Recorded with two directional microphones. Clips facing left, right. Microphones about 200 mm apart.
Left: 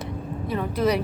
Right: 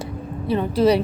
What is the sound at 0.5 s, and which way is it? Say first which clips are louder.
Speech: right 6 dB; 30° right (ahead or behind).